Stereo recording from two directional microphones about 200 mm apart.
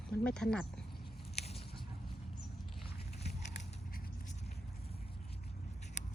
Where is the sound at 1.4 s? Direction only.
30° left (ahead or behind).